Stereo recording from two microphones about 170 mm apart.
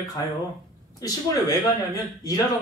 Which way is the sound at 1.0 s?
20° left (ahead or behind).